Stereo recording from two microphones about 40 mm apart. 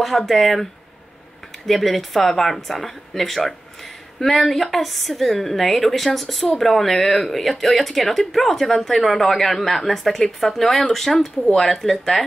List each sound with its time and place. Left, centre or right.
0.3 s speech: centre
1.7 s speech: centre